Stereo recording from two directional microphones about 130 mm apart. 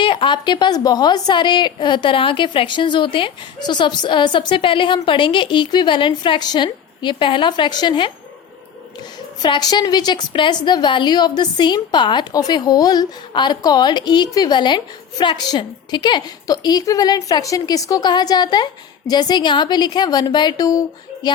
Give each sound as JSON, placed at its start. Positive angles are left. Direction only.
{"t": 0.0, "sound": "a woman's voice", "side_deg": 40}
{"t": 9.4, "sound": "a woman's voice", "side_deg": 30}